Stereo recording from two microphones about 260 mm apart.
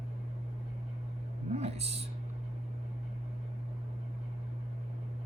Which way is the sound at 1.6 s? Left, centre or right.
Right.